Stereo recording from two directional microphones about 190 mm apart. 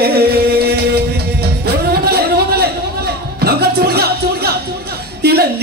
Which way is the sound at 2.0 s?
55° right (ahead or behind).